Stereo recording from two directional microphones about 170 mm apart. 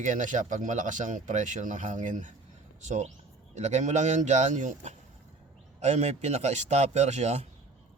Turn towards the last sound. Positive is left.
turn(degrees=-40)  # may be behind; listen again after turning